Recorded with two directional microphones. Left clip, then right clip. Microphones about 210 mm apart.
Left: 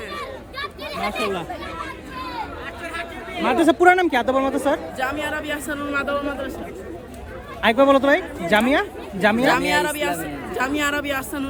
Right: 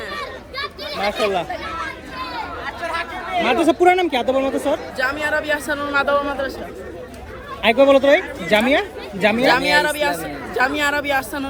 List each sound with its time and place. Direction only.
0.2 s children playing: 25° left (ahead or behind)
2.6 s chatter: 10° right (ahead or behind)
3.4 s speech: 35° left (ahead or behind)
4.9 s speech: 10° left (ahead or behind)
7.6 s speech: 30° left (ahead or behind)
9.5 s speech: 10° left (ahead or behind)